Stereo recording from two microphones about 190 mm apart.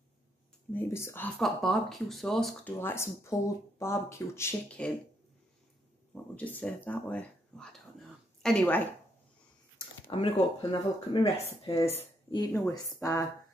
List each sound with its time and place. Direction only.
0.7 s speech: 10° left (ahead or behind)
6.3 s speech: 10° left (ahead or behind)
10.1 s speech: 30° left (ahead or behind)
12.7 s speech: 15° left (ahead or behind)